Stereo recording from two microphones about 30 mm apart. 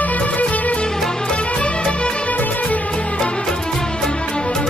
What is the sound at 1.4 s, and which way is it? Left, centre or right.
Music, left.